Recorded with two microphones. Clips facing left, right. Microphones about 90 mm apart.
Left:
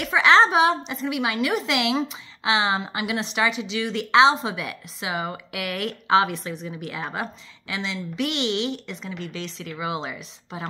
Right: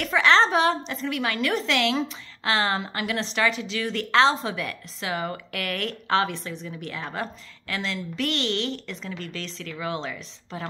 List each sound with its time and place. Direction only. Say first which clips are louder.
0.0 s a woman's voice: left 2 dB; 10° left (ahead or behind)